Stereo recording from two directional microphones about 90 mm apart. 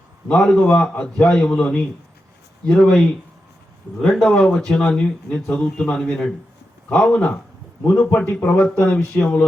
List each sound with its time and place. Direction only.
0.3 s a man's voice: 10° left (ahead or behind)